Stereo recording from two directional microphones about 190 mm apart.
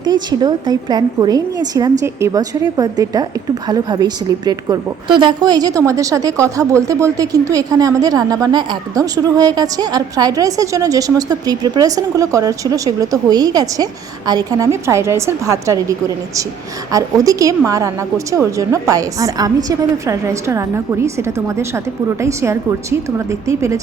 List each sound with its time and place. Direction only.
0.0 s a woman's voice: 20° right (ahead or behind)